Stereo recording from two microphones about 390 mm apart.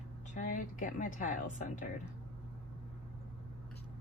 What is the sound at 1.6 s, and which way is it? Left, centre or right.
Speech, centre.